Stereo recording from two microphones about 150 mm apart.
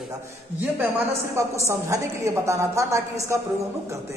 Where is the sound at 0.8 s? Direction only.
15° right (ahead or behind).